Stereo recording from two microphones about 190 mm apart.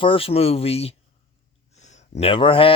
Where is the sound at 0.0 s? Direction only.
30° left (ahead or behind).